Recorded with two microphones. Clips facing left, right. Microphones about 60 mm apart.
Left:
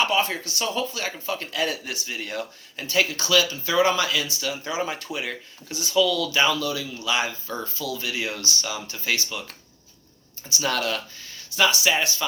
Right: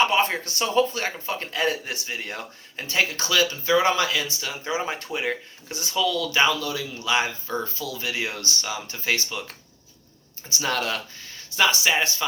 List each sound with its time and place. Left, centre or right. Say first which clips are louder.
0.0 s speech: right 2 dB; right
10.5 s speech: left 1 dB; right